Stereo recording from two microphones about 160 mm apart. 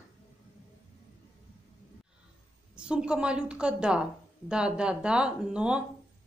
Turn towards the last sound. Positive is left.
turn(degrees=-5)  # may be behind; listen again after turning